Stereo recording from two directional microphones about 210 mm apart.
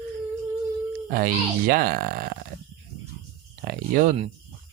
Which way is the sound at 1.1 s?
45° right (ahead or behind).